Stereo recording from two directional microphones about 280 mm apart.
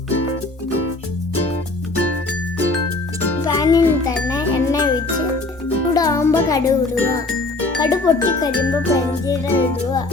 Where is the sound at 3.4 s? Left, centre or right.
Centre.